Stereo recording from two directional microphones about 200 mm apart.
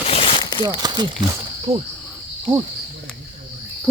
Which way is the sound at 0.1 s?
30° left (ahead or behind).